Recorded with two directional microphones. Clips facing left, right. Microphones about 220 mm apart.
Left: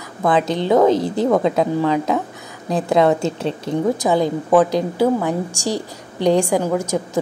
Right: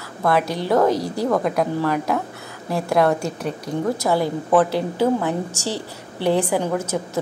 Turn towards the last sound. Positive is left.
turn(degrees=10)  # may be behind; listen again after turning